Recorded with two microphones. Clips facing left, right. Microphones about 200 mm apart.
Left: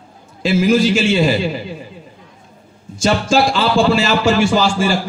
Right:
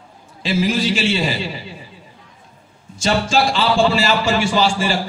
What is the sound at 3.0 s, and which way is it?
Speech, 45° left (ahead or behind).